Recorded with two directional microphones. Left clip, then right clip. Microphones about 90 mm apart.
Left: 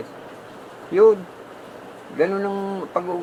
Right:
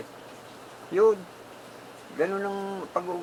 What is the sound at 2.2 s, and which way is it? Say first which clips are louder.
Speech: left 6 dB; 15° right (ahead or behind).